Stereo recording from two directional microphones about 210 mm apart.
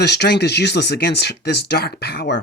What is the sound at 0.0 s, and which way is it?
Speech, 50° left (ahead or behind).